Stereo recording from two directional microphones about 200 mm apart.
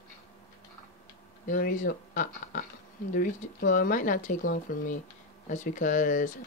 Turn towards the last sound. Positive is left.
turn(degrees=40)  # may be behind; listen again after turning